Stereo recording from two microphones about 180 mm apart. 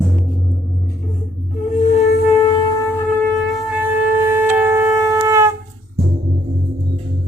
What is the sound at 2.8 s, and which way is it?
Shofar, 10° left (ahead or behind).